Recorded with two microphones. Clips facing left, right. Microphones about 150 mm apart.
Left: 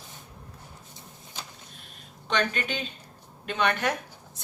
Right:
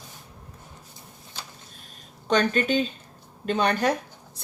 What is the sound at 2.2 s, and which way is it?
Speech, 40° right (ahead or behind).